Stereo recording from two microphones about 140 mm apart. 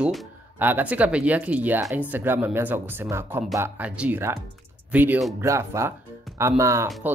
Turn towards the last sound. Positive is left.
turn(degrees=-20)  # may be behind; listen again after turning